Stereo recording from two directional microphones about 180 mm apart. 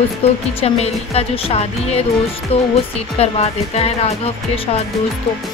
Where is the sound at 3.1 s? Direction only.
35° left (ahead or behind).